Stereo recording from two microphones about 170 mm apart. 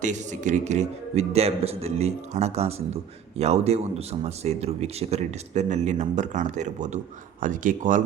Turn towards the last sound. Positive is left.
turn(degrees=-50)  # may be behind; listen again after turning